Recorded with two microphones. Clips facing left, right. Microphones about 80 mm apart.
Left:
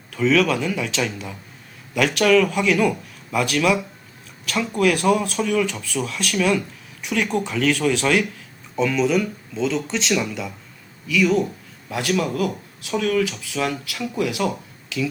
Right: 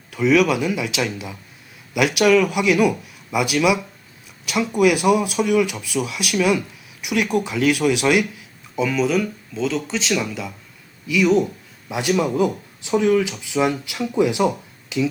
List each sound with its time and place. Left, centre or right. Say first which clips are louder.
0.1 s speech: right 2 dB; centre
11.1 s speech: right 2 dB; centre
14.8 s finger snapping: right 4 dB; right